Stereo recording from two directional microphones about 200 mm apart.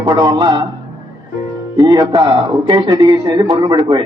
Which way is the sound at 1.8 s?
20° right (ahead or behind).